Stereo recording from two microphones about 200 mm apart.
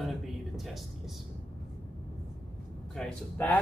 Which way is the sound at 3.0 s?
5° left (ahead or behind).